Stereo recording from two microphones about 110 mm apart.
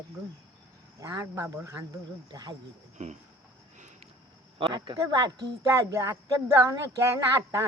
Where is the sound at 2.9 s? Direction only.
90° right.